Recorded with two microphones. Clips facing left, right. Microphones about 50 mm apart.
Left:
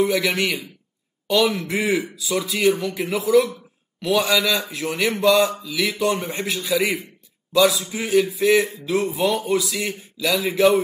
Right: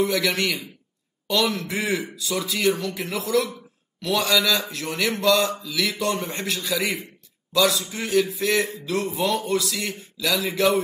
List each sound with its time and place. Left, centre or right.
0.1 s a man's voice: centre
1.2 s a sound: centre
2.1 s a man's voice: centre
2.5 s a man's voice: left
2.8 s a man's voice: centre
6.8 s a man's voice: left
7.5 s a man's voice: centre